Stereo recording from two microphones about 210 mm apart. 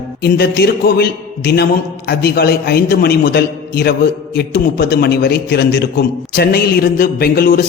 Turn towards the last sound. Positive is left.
turn(degrees=45)  # may be behind; listen again after turning